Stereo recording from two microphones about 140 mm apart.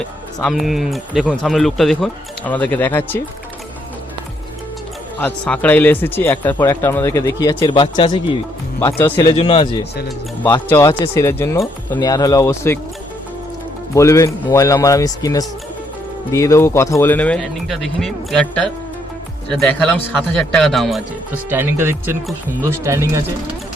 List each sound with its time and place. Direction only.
0.0 s speech: 5° left (ahead or behind)
5.2 s speech: 10° left (ahead or behind)
7.6 s speech: 35° left (ahead or behind)
8.8 s speech: 20° left (ahead or behind)
9.3 s speech: 40° left (ahead or behind)
10.7 s speech: 20° left (ahead or behind)
13.9 s speech: 20° left (ahead or behind); by 21.0 s centre (ahead or behind)
21.5 s speech: 15° right (ahead or behind)